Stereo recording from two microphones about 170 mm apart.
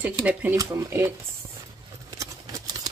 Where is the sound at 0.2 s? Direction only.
10° right (ahead or behind).